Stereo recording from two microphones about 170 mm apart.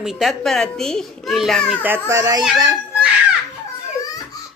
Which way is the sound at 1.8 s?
15° right (ahead or behind).